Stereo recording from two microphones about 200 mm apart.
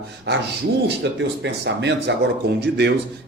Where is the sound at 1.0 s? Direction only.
60° right (ahead or behind).